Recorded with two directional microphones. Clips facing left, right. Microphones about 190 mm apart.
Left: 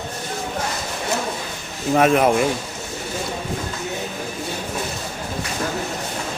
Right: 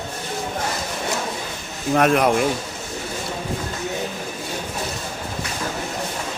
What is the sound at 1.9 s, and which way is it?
Speech, centre (ahead or behind).